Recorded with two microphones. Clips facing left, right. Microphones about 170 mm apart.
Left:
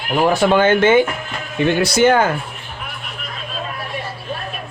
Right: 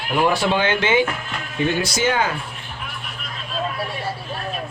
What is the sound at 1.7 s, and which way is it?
Speech, 60° left (ahead or behind).